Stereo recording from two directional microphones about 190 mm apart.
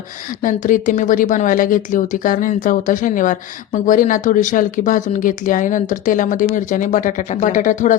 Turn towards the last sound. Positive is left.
turn(degrees=45)  # may be behind; listen again after turning